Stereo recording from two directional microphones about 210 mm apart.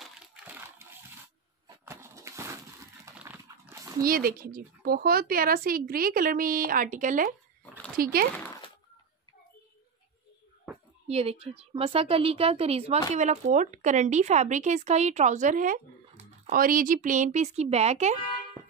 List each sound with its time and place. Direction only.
0.0 s crushing: 10° right (ahead or behind)
1.9 s a sound: 15° right (ahead or behind)
3.2 s dog: 10° right (ahead or behind)
4.0 s speech: 45° right (ahead or behind)
11.1 s a woman's voice: 30° right (ahead or behind)